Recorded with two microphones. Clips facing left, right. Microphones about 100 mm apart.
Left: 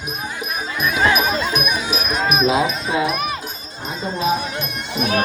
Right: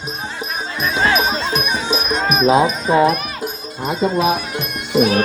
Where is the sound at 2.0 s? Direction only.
5° left (ahead or behind).